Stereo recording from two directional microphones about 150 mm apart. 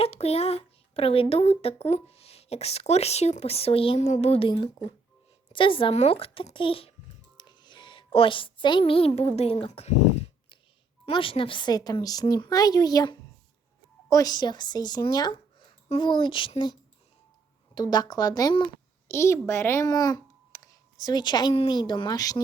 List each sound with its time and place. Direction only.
0.0 s a child's voice: 45° left (ahead or behind)
11.0 s a child's voice: 35° left (ahead or behind)
17.7 s speech: 25° left (ahead or behind)
19.0 s a child's voice: 20° left (ahead or behind)